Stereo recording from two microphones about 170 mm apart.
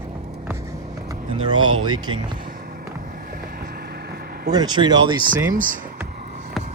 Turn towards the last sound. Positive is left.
turn(degrees=-50)  # may be behind; listen again after turning